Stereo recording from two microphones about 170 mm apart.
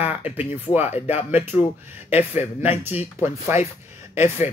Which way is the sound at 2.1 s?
40° left (ahead or behind).